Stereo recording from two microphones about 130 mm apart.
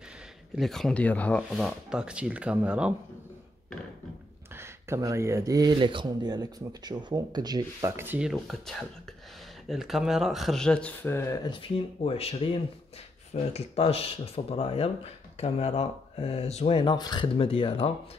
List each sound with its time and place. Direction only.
0.6 s speech: 5° left (ahead or behind)
1.5 s speech: 5° right (ahead or behind)
4.6 s speech: 20° right (ahead or behind)
5.8 s speech: 40° right (ahead or behind)
7.9 s speech: 15° right (ahead or behind)
8.2 s speech: centre (ahead or behind); by 11.3 s 20° left (ahead or behind)
11.4 s speech: 40° left (ahead or behind)
16.9 s speech: 30° left (ahead or behind)